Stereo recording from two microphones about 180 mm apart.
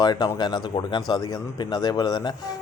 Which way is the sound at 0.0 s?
20° left (ahead or behind).